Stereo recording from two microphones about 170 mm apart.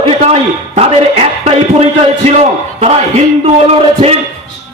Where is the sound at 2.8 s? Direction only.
35° right (ahead or behind).